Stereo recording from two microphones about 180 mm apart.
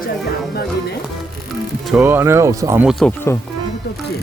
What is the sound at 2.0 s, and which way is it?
Speech, 15° right (ahead or behind).